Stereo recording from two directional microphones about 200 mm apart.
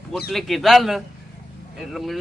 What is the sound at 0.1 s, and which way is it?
Speech, centre (ahead or behind).